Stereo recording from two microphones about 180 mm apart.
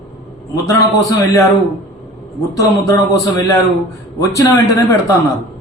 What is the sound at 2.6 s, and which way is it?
Speech, 20° left (ahead or behind).